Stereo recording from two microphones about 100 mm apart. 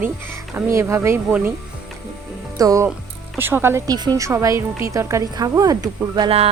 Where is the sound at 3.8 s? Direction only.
45° right (ahead or behind).